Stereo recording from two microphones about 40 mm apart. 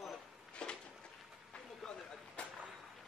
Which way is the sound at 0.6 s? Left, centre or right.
Left.